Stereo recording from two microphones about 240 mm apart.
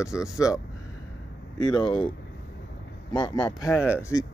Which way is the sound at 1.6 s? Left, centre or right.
Centre.